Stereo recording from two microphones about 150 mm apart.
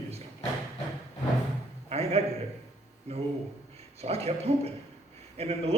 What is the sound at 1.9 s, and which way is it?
Speech, 45° right (ahead or behind).